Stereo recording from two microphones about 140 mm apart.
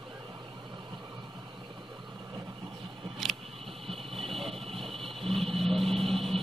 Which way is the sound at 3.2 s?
Centre (ahead or behind).